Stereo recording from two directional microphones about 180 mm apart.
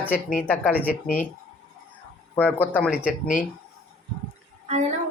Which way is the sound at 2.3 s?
10° left (ahead or behind).